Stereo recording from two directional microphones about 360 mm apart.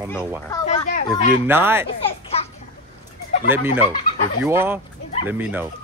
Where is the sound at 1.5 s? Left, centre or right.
Centre.